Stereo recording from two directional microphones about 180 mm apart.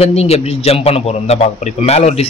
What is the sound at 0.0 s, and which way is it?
A man's voice, 35° left (ahead or behind).